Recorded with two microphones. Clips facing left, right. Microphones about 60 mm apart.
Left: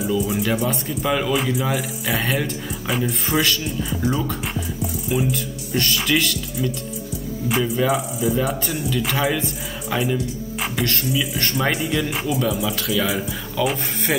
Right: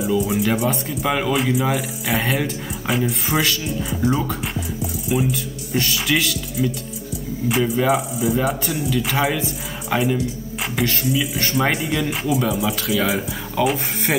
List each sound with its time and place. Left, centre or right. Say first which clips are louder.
0.2 s speech: right 2 dB; centre
13.6 s speech: right 2 dB; right